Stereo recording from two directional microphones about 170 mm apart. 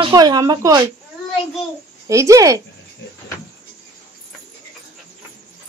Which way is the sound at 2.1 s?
20° right (ahead or behind).